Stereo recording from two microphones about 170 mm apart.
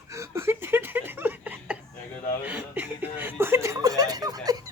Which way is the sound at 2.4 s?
10° right (ahead or behind).